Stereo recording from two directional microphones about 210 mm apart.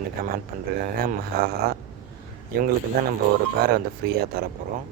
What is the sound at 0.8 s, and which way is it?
Speech, 45° right (ahead or behind).